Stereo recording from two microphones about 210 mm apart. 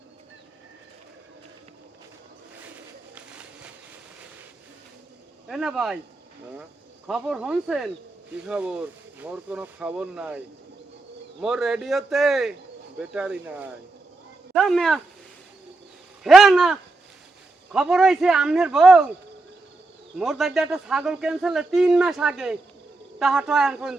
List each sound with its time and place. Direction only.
3.2 s a sound: 5° right (ahead or behind)
5.5 s speech: centre (ahead or behind)
7.1 s speech: 5° right (ahead or behind)
16.2 s speech: centre (ahead or behind)
20.1 s speech: centre (ahead or behind)